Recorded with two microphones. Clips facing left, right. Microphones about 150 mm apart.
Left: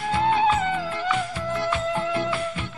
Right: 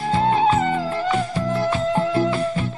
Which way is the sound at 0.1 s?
35° right (ahead or behind).